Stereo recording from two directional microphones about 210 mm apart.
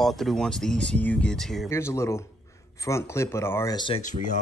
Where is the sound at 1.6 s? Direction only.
10° left (ahead or behind).